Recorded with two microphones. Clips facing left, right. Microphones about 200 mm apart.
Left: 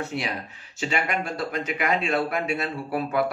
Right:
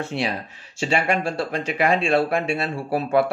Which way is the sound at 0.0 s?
30° right (ahead or behind).